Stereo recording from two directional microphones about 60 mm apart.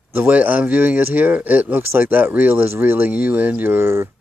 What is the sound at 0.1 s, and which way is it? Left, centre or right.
Speech, right.